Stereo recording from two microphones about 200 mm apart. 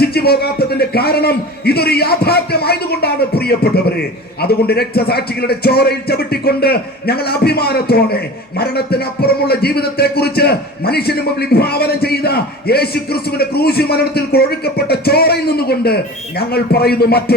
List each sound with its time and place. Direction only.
0.0 s a man's voice: 50° left (ahead or behind)